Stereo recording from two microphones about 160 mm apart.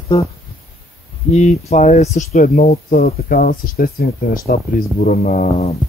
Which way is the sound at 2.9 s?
70° left (ahead or behind).